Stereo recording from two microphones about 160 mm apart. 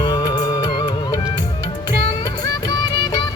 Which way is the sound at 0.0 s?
25° left (ahead or behind).